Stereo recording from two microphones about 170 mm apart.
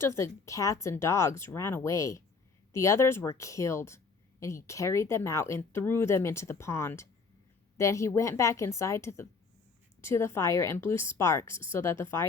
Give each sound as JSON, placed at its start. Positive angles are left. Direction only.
{"t": 0.0, "sound": "speech", "side_deg": 15}